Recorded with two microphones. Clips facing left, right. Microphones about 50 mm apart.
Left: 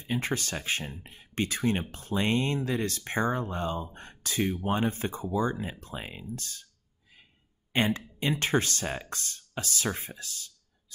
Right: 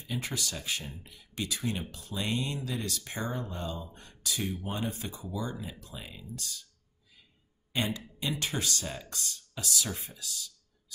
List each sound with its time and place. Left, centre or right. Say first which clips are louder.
0.0 s speech: left 5 dB; left
7.7 s speech: left 5 dB; left